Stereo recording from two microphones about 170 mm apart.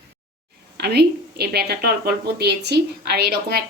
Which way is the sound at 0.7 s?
70° right (ahead or behind).